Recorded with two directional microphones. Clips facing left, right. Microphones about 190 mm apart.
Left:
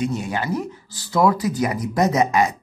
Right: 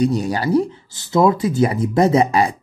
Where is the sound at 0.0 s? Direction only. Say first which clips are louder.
Right 6 dB; 35° right (ahead or behind).